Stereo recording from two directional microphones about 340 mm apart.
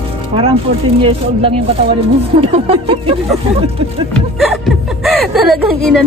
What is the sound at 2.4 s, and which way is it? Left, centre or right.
Speech, centre.